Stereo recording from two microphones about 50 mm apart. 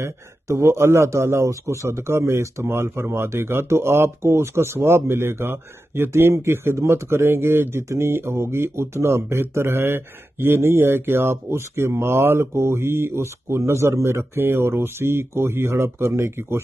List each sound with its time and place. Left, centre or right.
0.0 s speech: right
2.6 s speech: right
14.3 s speech: right